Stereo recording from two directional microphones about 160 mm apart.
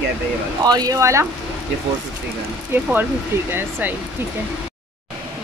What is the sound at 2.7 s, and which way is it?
A woman's voice, 15° right (ahead or behind).